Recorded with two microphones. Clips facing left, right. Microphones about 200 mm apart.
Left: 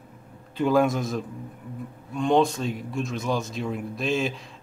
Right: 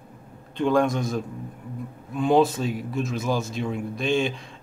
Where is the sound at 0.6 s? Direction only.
5° left (ahead or behind).